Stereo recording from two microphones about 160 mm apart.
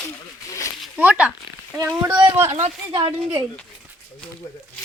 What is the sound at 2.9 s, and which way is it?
Speech, 30° right (ahead or behind).